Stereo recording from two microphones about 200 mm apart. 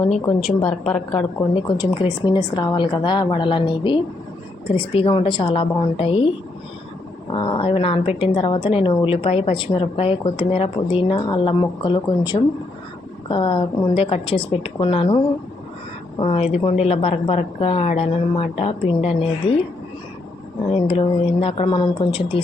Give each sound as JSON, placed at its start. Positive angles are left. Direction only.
{"t": 0.0, "sound": "a woman's voice", "side_deg": 30}
{"t": 0.9, "sound": "a woman's voice", "side_deg": 5}
{"t": 1.5, "sound": "a woman's voice", "side_deg": 20}
{"t": 20.7, "sound": "a woman's voice", "side_deg": 30}